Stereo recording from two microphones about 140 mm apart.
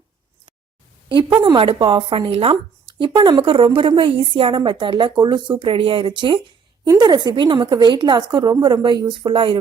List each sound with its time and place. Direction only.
1.5 s a woman's voice: 40° right (ahead or behind)